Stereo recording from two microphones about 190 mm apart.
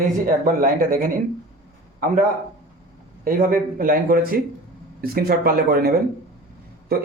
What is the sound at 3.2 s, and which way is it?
Speech, 45° right (ahead or behind).